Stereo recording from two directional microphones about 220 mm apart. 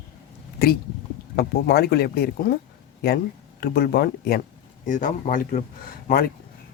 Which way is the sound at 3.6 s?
45° left (ahead or behind).